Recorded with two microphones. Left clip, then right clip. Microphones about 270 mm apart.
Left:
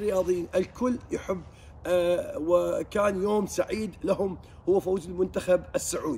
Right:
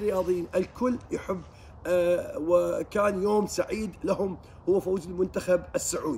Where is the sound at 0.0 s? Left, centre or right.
Centre.